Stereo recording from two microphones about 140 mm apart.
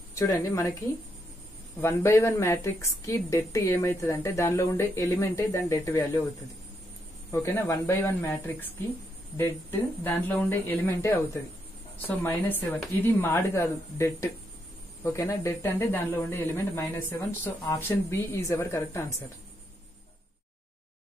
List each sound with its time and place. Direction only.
0.1 s a woman's voice: 25° left (ahead or behind)
7.2 s a woman's voice: 20° left (ahead or behind)